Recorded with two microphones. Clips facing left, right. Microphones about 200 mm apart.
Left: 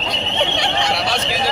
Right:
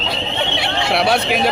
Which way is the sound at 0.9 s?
60° right (ahead or behind).